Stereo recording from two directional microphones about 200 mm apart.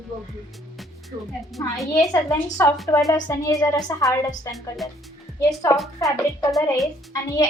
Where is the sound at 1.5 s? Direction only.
Centre (ahead or behind).